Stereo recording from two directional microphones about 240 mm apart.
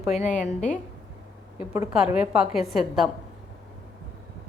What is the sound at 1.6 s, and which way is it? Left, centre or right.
A woman's voice, centre.